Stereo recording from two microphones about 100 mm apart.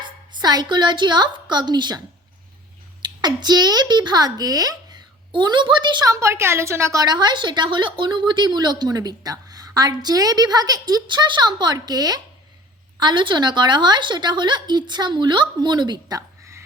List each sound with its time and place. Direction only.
0.3 s a woman's voice: 45° right (ahead or behind)
3.0 s a child's voice: 45° right (ahead or behind)
6.1 s a woman's voice: 30° right (ahead or behind)